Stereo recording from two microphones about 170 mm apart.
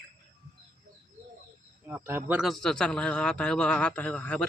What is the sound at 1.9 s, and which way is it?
Speech, 15° right (ahead or behind).